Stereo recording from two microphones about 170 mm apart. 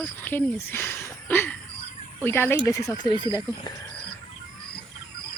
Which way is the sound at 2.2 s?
15° left (ahead or behind).